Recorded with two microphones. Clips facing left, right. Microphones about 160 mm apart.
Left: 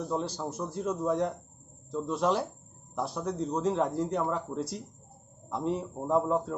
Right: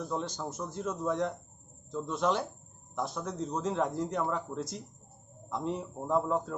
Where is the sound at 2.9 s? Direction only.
35° left (ahead or behind).